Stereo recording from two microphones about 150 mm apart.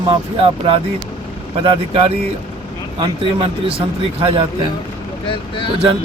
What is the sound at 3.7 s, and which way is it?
Speech, 40° right (ahead or behind).